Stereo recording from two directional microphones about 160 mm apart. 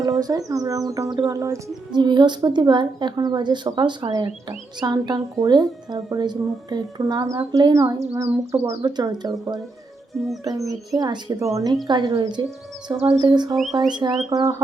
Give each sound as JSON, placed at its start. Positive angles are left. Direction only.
{"t": 0.2, "sound": "speech", "side_deg": -20}
{"t": 10.4, "sound": "speech", "side_deg": -20}
{"t": 13.5, "sound": "speech", "side_deg": 0}
{"t": 14.3, "sound": "speech", "side_deg": -25}